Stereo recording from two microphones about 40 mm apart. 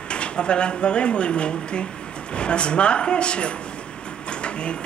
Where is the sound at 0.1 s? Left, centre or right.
Left.